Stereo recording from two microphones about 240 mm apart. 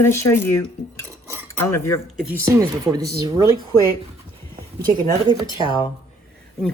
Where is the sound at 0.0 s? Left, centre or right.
Centre.